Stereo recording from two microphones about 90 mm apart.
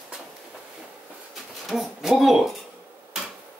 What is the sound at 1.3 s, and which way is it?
Speech, centre (ahead or behind).